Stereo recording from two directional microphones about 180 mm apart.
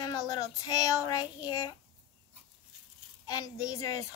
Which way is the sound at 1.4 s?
20° left (ahead or behind).